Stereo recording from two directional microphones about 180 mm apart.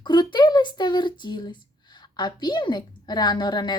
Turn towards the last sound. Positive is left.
turn(degrees=25)  # may be behind; listen again after turning